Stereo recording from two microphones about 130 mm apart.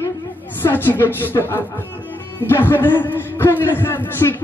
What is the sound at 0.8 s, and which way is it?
A man's voice, 15° left (ahead or behind).